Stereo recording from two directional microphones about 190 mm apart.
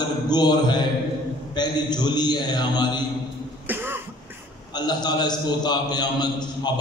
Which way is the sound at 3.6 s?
10° right (ahead or behind).